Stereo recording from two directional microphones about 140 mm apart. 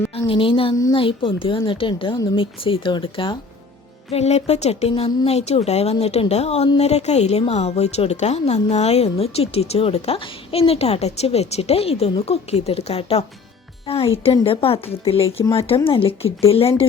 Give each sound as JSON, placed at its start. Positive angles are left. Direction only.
{"t": 0.1, "sound": "a woman's voice", "side_deg": 40}
{"t": 4.1, "sound": "a woman's voice", "side_deg": 50}